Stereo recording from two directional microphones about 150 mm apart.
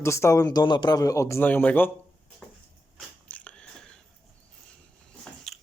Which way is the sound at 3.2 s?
10° left (ahead or behind).